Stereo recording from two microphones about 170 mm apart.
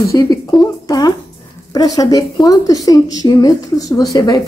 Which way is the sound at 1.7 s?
20° left (ahead or behind).